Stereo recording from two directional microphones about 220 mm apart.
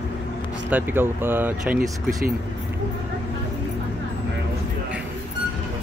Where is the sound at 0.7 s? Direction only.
10° right (ahead or behind).